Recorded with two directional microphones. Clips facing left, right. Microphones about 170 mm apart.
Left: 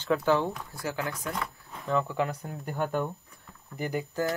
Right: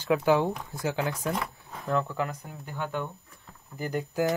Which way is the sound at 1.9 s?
Centre (ahead or behind).